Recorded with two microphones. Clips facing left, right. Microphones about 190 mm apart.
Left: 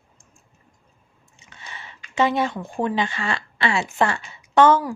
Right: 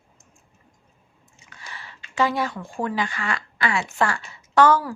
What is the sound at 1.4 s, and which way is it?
Biting, 20° left (ahead or behind).